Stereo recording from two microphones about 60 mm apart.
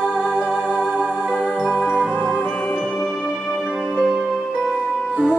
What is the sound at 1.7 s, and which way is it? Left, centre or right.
Music, left.